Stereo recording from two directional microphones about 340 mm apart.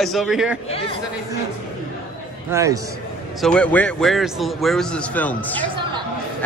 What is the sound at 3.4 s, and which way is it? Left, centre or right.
Speech, centre.